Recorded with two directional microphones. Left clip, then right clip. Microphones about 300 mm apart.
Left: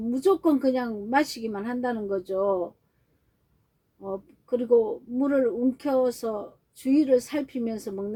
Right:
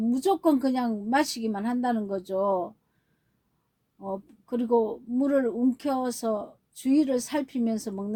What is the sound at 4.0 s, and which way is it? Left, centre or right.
A woman's voice, right.